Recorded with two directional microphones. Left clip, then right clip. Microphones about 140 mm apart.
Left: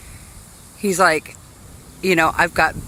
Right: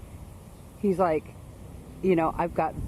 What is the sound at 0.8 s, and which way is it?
Speech, 15° left (ahead or behind).